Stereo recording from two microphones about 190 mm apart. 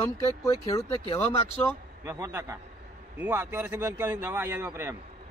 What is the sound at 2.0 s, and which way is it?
A man's voice, 15° right (ahead or behind).